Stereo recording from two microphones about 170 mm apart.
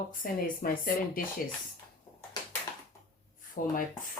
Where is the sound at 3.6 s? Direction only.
55° left (ahead or behind).